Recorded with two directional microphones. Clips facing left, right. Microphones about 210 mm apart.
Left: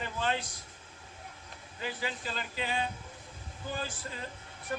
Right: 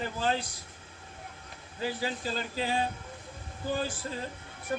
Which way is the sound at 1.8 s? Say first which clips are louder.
Right 5 dB; 35° right (ahead or behind).